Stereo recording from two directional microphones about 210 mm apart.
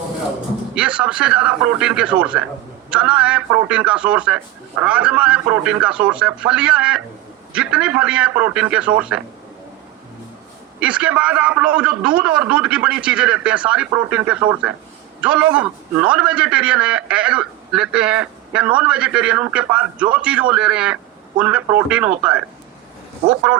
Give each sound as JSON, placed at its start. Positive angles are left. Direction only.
{"t": 0.8, "sound": "a man's voice", "side_deg": -5}
{"t": 10.8, "sound": "a man's voice", "side_deg": -5}